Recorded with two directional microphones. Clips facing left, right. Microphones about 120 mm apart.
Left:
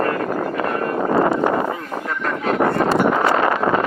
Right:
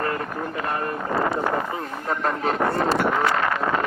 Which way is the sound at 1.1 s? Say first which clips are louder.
Left 6 dB; 50° left (ahead or behind).